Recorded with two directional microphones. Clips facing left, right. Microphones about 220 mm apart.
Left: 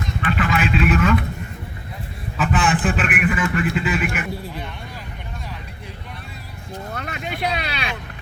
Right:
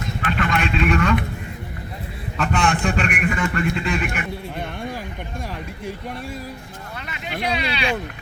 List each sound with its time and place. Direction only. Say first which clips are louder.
0.3 s a man's voice: left 2 dB; centre (ahead or behind)
2.4 s a man's voice: left 1 dB; 5° left (ahead or behind)
6.9 s vehicle: even; 50° left (ahead or behind)